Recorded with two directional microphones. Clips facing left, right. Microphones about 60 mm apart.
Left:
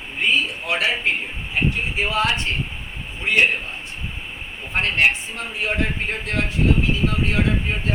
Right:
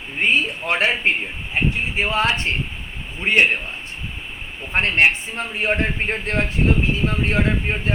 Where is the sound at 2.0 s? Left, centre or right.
Right.